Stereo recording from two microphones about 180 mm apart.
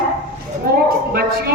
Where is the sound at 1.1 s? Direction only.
60° right (ahead or behind).